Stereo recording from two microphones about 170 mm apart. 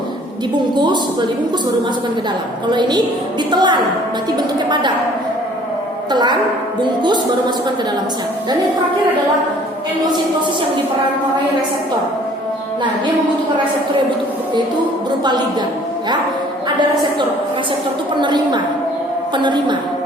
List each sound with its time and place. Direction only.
2.6 s a woman's voice: 25° right (ahead or behind)
6.1 s a woman's voice: 25° right (ahead or behind)
18.2 s a woman's voice: 25° right (ahead or behind)